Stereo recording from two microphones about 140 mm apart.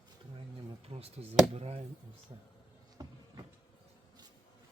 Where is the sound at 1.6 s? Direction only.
45° right (ahead or behind).